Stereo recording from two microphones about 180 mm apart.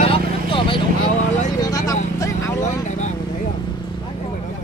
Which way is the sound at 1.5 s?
20° left (ahead or behind).